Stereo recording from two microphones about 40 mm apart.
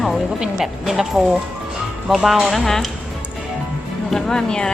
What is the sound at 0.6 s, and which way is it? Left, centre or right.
A woman's voice, centre.